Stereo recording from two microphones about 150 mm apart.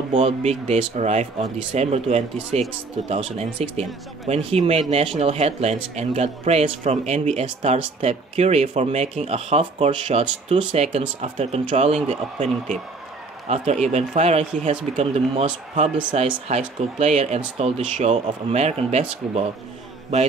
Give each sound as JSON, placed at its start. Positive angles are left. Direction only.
{"t": 0.1, "sound": "speech", "side_deg": -50}
{"t": 13.5, "sound": "speech", "side_deg": -45}
{"t": 16.1, "sound": "speech", "side_deg": -35}
{"t": 16.4, "sound": "speech", "side_deg": -45}